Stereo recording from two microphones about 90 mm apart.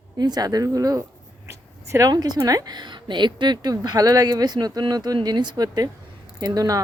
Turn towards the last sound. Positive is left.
turn(degrees=-45)  # may be behind; listen again after turning